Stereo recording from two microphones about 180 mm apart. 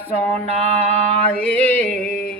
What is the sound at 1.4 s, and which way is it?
Speech, 5° left (ahead or behind).